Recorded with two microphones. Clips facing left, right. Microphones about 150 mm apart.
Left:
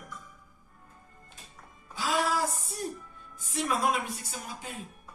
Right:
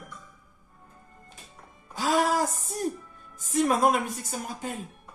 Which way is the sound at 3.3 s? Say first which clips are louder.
Right 7 dB; 45° right (ahead or behind).